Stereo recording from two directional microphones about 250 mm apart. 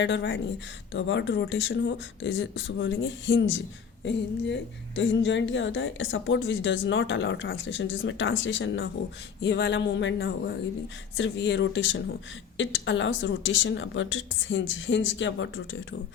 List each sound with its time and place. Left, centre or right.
0.0 s speech: left